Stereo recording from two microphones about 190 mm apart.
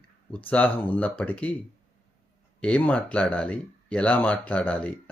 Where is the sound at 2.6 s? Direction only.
5° left (ahead or behind).